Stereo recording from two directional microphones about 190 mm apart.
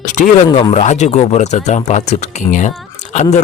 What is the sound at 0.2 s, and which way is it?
Speech, 40° left (ahead or behind).